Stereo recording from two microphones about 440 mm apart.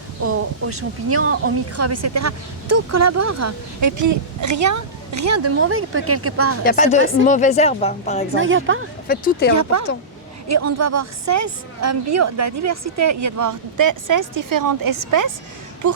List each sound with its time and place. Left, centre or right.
0.2 s speech: right
6.7 s speech: centre
8.4 s a woman's voice: right
9.0 s speech: centre
10.5 s speech: right